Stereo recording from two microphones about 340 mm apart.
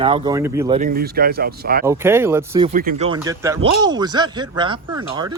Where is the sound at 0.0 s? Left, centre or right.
Centre.